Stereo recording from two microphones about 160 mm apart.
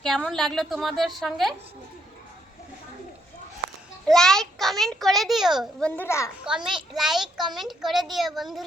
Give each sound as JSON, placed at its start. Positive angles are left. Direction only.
{"t": 0.0, "sound": "a child's voice", "side_deg": 5}
{"t": 4.0, "sound": "a child's voice", "side_deg": 5}
{"t": 6.0, "sound": "a child's voice", "side_deg": 15}
{"t": 6.4, "sound": "a child's voice", "side_deg": -5}